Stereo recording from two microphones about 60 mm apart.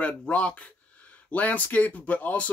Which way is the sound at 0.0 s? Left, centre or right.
Left.